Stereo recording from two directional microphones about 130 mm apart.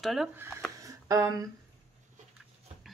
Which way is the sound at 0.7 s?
25° right (ahead or behind).